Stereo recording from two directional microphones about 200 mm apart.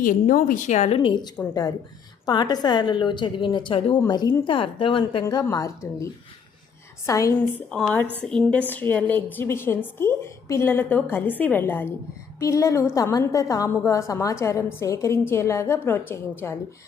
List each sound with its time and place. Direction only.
0.0 s a woman's voice: 45° left (ahead or behind); by 7.8 s 15° left (ahead or behind)
7.8 s a woman's voice: 5° left (ahead or behind)